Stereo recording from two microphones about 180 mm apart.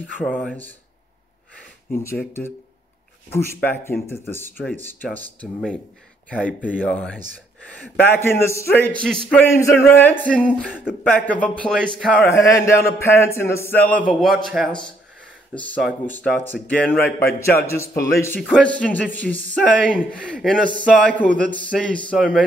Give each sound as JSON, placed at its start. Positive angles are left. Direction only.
{"t": 0.2, "sound": "speech", "side_deg": 0}
{"t": 2.0, "sound": "a man's voice", "side_deg": 10}
{"t": 6.8, "sound": "a man's voice", "side_deg": 5}
{"t": 10.6, "sound": "speech", "side_deg": -5}
{"t": 11.1, "sound": "a man's voice", "side_deg": 10}